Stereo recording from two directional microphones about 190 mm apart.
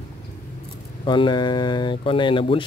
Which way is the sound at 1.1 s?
25° left (ahead or behind).